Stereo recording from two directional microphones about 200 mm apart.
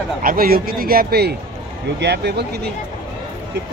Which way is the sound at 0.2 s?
45° right (ahead or behind).